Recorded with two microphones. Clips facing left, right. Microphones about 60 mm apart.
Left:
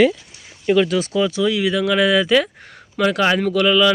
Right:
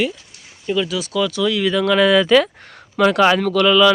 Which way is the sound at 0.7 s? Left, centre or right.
Left.